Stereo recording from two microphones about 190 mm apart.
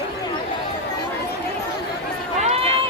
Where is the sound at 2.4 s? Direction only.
35° right (ahead or behind).